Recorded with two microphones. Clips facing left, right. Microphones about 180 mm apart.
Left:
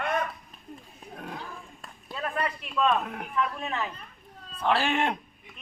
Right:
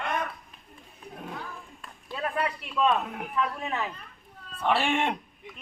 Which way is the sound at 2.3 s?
10° right (ahead or behind).